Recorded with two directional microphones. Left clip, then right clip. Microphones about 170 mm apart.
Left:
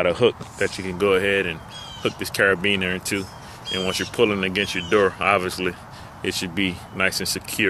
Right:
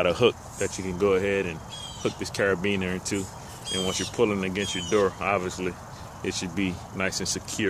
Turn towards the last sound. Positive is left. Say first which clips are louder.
# left 6 dB
turn(degrees=0)  # may be behind; listen again after turning